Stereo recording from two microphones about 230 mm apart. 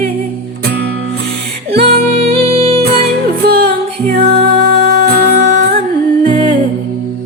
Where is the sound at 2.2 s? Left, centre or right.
Right.